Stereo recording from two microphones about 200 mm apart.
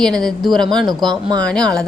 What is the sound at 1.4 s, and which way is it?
Speech, 5° left (ahead or behind).